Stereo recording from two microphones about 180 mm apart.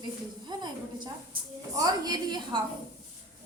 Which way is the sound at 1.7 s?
20° right (ahead or behind).